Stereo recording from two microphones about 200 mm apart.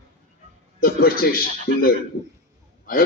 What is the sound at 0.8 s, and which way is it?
A man's voice, 45° left (ahead or behind).